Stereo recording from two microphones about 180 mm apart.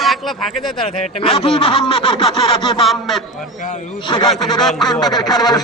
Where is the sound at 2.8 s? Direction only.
Centre (ahead or behind).